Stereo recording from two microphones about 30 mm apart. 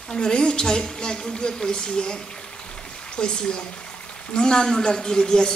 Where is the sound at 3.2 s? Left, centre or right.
Left.